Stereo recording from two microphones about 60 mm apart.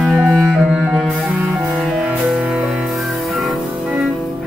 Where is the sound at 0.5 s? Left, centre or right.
Centre.